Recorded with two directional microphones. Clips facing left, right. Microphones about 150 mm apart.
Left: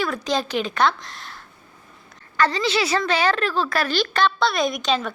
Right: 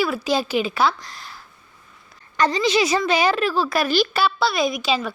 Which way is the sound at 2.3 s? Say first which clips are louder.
Right 2 dB; 15° right (ahead or behind).